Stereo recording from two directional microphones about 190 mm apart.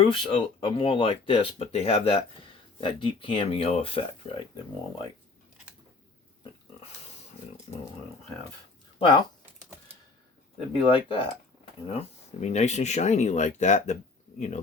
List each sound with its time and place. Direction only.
0.1 s speech: 25° left (ahead or behind)
9.0 s speech: 25° left (ahead or behind)
10.7 s speech: 25° left (ahead or behind)